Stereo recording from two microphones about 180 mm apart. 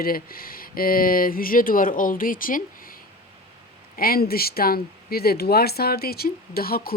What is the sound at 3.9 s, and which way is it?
Speech, 55° left (ahead or behind).